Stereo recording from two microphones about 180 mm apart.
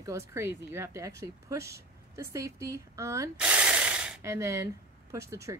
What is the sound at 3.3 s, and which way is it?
Rub, 5° right (ahead or behind).